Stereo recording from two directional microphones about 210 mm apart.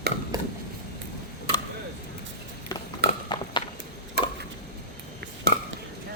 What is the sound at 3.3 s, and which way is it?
Clip-clop, 20° left (ahead or behind).